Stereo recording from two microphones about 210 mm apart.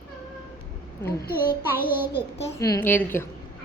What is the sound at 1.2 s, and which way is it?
Speech, 45° left (ahead or behind).